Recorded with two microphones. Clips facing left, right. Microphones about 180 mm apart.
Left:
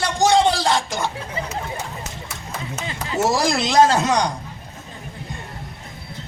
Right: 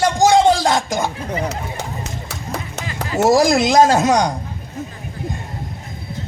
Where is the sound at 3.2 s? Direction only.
40° right (ahead or behind).